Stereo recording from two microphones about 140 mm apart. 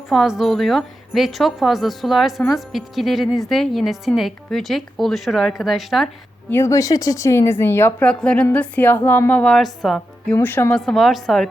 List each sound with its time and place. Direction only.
0.1 s a woman's voice: centre (ahead or behind)
6.5 s speech: 20° left (ahead or behind); by 10.3 s centre (ahead or behind)
10.3 s a woman's voice: 15° left (ahead or behind)